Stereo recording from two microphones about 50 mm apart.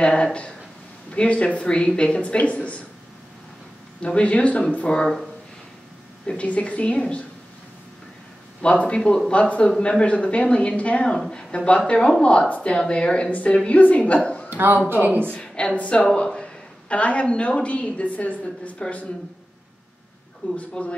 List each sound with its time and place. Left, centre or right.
0.0 s a woman's voice: centre
4.0 s a woman's voice: left
6.2 s a woman's voice: left
8.6 s a woman's voice: left
14.9 s speech: right
15.4 s a woman's voice: centre
20.4 s a woman's voice: left